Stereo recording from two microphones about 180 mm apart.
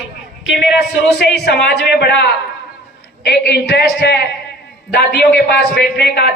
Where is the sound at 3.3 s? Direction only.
65° left (ahead or behind).